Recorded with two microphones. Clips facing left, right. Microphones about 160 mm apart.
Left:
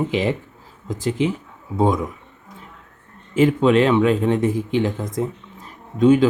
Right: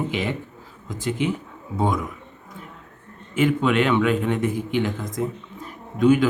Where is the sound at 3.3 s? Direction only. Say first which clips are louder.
Left 4 dB; 35° left (ahead or behind).